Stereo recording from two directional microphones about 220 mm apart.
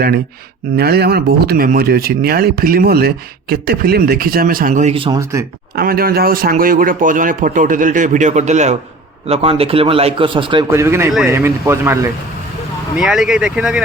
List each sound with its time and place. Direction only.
0.8 s a man's voice: 45° right (ahead or behind); by 5.5 s 15° right (ahead or behind)
5.7 s a man's voice: 45° right (ahead or behind); by 10.7 s 20° right (ahead or behind)
10.7 s speech: 10° right (ahead or behind)
13.0 s speech: 5° right (ahead or behind)